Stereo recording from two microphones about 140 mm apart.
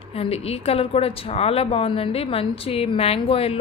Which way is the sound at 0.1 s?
45° left (ahead or behind).